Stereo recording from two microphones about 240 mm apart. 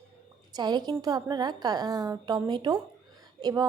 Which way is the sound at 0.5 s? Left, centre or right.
Centre.